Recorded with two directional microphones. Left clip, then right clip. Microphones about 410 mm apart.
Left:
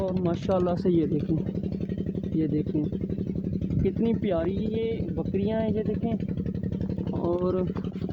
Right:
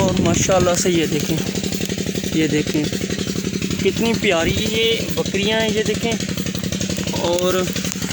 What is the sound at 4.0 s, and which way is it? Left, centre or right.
Speech, left.